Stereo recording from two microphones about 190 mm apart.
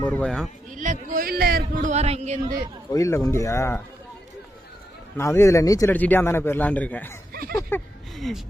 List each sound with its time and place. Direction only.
0.0 s a man's voice: 5° left (ahead or behind)
0.7 s speech: 40° right (ahead or behind)
2.9 s a man's voice: 15° left (ahead or behind)
5.1 s a man's voice: 15° left (ahead or behind)
8.1 s speech: centre (ahead or behind)